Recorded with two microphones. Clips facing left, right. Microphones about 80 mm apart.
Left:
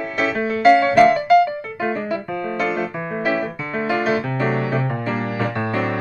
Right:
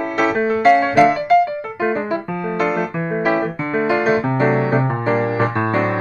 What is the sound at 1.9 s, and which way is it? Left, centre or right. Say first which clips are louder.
Piano: right 2 dB; right.